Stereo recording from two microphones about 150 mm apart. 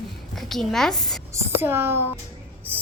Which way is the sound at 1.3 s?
15° right (ahead or behind).